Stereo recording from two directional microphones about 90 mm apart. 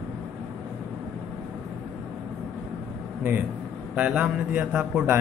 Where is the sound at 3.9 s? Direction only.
10° right (ahead or behind).